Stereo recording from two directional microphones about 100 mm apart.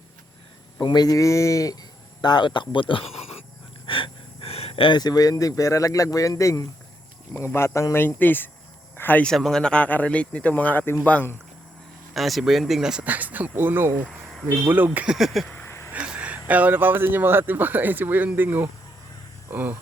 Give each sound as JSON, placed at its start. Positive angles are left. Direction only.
{"t": 0.8, "sound": "speech", "side_deg": 45}
{"t": 9.3, "sound": "speech", "side_deg": 5}
{"t": 12.1, "sound": "speech", "side_deg": 0}
{"t": 14.1, "sound": "a sound", "side_deg": 0}
{"t": 14.4, "sound": "speech", "side_deg": -20}
{"t": 15.0, "sound": "speech", "side_deg": -5}
{"t": 15.9, "sound": "speech", "side_deg": -10}